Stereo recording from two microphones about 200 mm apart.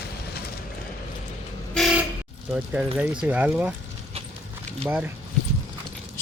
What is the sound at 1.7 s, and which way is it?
Vehicle, centre (ahead or behind).